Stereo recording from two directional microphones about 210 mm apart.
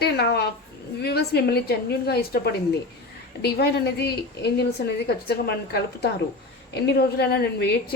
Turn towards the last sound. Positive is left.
turn(degrees=50)  # may be behind; listen again after turning